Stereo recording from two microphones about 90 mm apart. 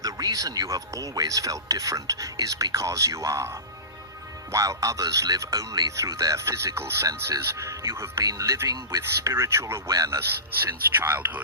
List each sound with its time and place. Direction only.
0.0 s speech: 45° right (ahead or behind)
4.5 s speech: 40° right (ahead or behind)